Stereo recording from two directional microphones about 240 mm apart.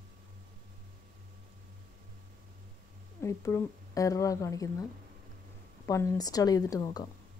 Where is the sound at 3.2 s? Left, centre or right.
Centre.